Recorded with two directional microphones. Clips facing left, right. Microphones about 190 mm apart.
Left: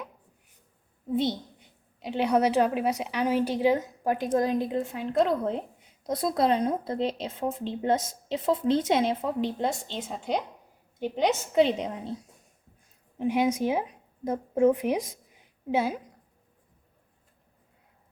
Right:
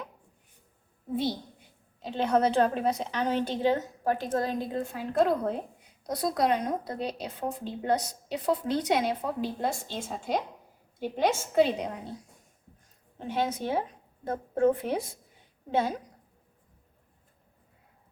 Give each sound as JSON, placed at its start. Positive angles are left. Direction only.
{"t": 1.1, "sound": "a woman's voice", "side_deg": 20}
{"t": 6.1, "sound": "a woman's voice", "side_deg": 25}
{"t": 11.0, "sound": "a woman's voice", "side_deg": 20}
{"t": 13.1, "sound": "a woman's voice", "side_deg": 10}